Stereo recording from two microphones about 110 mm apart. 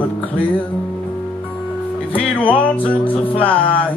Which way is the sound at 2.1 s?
15° left (ahead or behind).